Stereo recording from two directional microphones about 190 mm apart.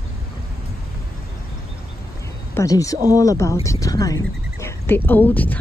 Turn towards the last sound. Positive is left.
turn(degrees=10)  # may be behind; listen again after turning